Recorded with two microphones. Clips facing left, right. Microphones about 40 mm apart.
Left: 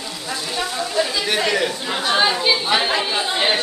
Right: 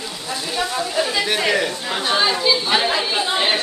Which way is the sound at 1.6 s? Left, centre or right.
Centre.